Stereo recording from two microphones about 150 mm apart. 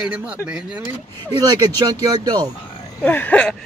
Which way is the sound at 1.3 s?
25° right (ahead or behind).